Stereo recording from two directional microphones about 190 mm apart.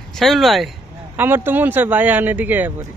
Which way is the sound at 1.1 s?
10° right (ahead or behind).